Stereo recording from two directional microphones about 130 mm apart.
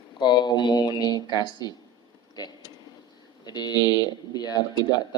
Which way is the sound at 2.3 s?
30° left (ahead or behind).